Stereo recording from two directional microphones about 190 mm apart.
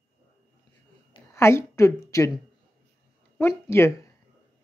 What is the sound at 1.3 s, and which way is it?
Speech, 15° left (ahead or behind).